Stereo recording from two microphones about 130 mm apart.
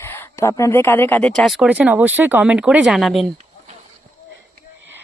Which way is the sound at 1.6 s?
10° right (ahead or behind).